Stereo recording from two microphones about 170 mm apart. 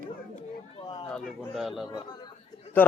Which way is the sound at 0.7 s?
30° left (ahead or behind).